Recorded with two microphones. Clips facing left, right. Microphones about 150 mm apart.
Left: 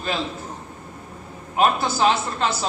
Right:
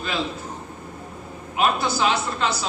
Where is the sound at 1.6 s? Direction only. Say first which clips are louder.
Left 2 dB; 40° left (ahead or behind).